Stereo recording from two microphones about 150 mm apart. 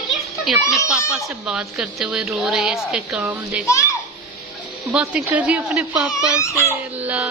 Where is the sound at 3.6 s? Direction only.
20° left (ahead or behind).